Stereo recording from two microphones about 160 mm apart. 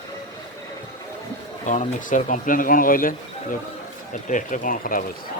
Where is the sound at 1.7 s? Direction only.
50° left (ahead or behind).